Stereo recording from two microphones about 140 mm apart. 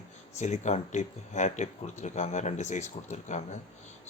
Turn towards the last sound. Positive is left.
turn(degrees=60)  # may be behind; listen again after turning